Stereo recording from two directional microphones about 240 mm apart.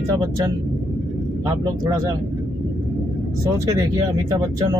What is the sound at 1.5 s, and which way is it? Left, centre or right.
Speech, centre.